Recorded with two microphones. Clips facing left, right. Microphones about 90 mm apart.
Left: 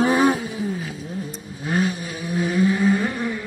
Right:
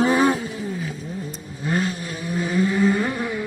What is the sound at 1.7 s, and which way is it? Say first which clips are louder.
Vehicle: left 1 dB; 10° left (ahead or behind).